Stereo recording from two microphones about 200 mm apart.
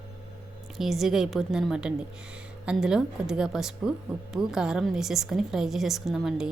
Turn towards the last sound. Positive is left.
turn(degrees=0)  # may be behind; listen again after turning